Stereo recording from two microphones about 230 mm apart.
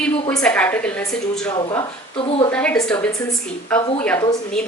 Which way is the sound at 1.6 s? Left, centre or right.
Centre.